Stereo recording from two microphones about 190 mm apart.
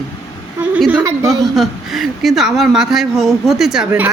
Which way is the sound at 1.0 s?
15° right (ahead or behind).